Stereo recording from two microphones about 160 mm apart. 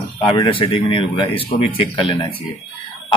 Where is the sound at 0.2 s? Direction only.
30° left (ahead or behind).